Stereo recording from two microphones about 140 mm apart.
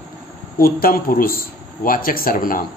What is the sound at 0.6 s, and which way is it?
A man's voice, 90° left.